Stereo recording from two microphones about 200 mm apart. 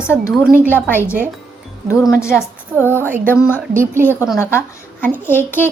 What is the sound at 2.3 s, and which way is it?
A woman's voice, 10° right (ahead or behind).